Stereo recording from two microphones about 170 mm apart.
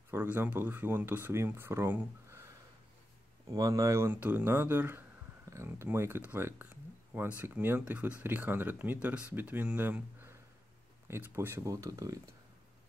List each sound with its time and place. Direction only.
0.1 s speech: 15° right (ahead or behind)
3.4 s speech: 20° right (ahead or behind)